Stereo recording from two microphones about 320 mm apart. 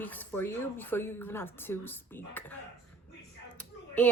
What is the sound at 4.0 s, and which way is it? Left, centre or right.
Speech, centre.